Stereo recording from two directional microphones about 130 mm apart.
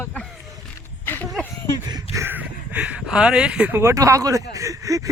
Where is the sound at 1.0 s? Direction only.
15° left (ahead or behind).